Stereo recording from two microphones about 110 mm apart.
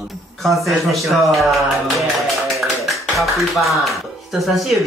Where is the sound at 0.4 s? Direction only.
Centre (ahead or behind).